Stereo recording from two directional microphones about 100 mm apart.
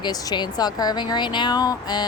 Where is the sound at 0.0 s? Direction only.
40° left (ahead or behind).